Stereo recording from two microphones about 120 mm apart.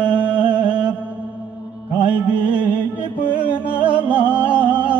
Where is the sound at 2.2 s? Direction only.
10° right (ahead or behind).